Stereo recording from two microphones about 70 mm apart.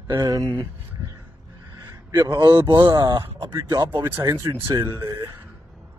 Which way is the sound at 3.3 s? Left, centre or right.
Right.